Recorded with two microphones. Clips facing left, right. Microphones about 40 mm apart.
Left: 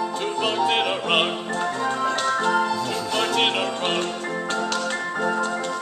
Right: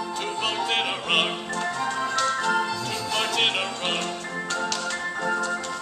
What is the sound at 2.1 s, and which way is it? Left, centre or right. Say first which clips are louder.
Music: left 1 dB; left.